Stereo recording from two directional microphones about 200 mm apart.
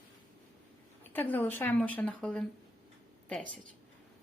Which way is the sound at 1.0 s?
10° left (ahead or behind).